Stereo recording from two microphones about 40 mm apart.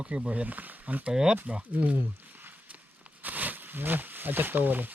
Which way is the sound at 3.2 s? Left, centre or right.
Right.